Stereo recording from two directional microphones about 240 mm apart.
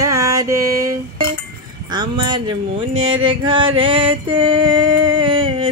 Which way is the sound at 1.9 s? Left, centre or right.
Centre.